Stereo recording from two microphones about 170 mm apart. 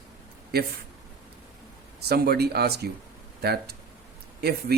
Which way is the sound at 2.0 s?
65° right (ahead or behind).